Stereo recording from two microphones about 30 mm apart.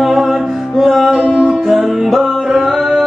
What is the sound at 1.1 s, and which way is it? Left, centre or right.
Music, right.